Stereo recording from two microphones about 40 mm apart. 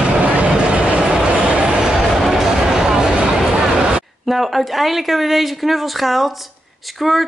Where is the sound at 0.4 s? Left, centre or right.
Right.